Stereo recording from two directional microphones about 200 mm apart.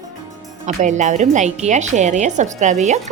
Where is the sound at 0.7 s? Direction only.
35° right (ahead or behind).